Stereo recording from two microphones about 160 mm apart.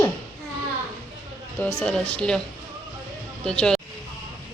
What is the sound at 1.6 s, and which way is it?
Speech, 5° left (ahead or behind).